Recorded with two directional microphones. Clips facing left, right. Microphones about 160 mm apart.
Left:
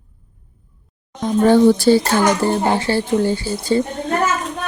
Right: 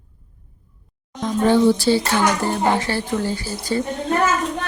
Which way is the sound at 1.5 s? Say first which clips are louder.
Left 4 dB; 50° left (ahead or behind).